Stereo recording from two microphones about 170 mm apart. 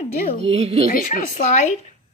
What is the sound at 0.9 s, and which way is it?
Speech, 55° left (ahead or behind).